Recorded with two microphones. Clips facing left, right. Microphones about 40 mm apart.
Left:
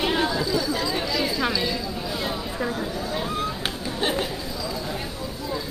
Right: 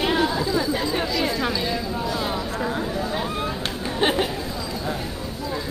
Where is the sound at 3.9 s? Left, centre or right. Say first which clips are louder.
Right 5 dB; right.